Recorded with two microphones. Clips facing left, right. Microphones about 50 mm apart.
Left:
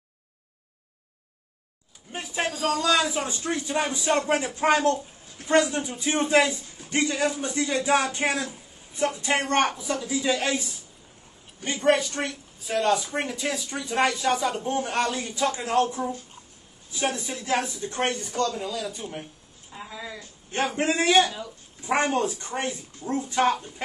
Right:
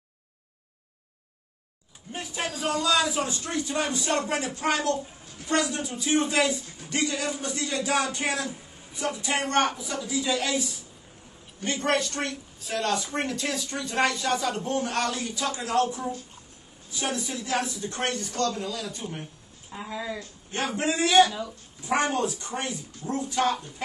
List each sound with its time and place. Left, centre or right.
2.1 s speech: left
11.6 s speech: centre
18.6 s speech: centre
19.7 s speech: centre
20.5 s speech: left
21.3 s speech: centre
21.8 s speech: left